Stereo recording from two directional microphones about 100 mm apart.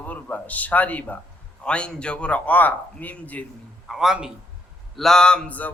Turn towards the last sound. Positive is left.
turn(degrees=10)  # may be behind; listen again after turning